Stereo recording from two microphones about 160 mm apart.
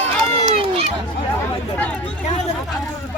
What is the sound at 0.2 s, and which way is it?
Run, 35° right (ahead or behind).